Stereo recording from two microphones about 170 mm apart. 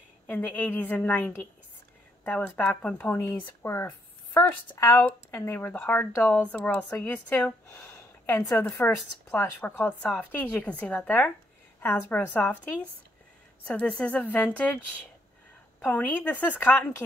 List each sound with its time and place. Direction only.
0.3 s speech: 10° left (ahead or behind)
15.8 s speech: 10° left (ahead or behind)